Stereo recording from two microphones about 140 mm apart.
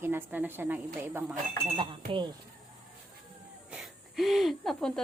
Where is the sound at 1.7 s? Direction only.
35° right (ahead or behind).